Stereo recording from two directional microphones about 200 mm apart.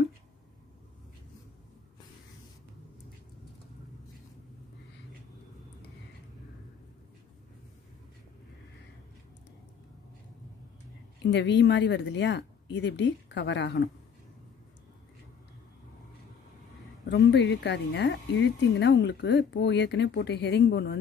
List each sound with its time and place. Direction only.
11.2 s speech: 60° left (ahead or behind)
17.1 s speech: 60° left (ahead or behind)